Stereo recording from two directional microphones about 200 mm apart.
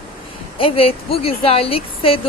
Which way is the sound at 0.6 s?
30° left (ahead or behind).